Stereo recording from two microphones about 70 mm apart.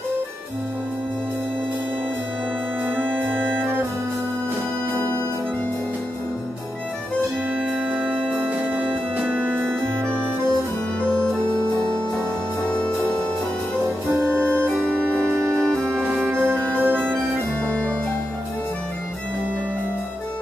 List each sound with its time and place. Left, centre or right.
3.0 s music: right
7.5 s organ: centre; by 10.5 s right
12.6 s music: centre
14.1 s music: right
17.6 s music: centre